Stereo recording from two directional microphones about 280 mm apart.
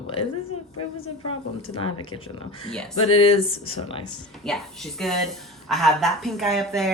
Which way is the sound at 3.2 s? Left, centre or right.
Centre.